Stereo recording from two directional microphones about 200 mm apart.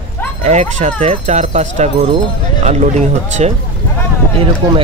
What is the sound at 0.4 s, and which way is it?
Speech, 35° right (ahead or behind).